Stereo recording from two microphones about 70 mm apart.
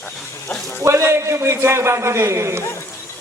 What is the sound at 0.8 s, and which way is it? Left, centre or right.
Speech, right.